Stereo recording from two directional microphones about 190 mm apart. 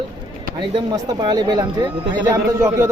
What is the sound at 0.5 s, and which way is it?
A man's voice, 25° right (ahead or behind).